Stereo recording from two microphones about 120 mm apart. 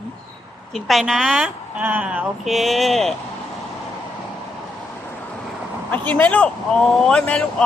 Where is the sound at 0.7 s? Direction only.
Centre (ahead or behind).